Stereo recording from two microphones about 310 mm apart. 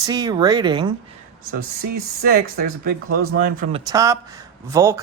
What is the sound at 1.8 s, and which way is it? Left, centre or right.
Speech, right.